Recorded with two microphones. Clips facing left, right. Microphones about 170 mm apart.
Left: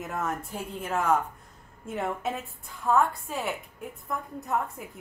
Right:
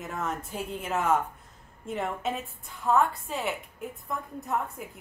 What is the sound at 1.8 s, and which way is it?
A woman's voice, centre (ahead or behind).